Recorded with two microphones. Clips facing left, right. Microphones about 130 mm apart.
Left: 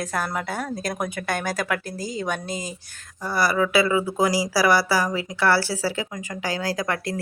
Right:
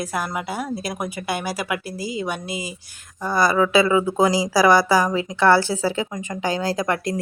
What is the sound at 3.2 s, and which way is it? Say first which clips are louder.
A woman's voice: right 3 dB; 20° right (ahead or behind).